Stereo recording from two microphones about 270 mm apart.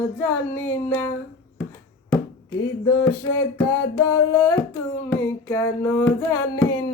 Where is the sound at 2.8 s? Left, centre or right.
Centre.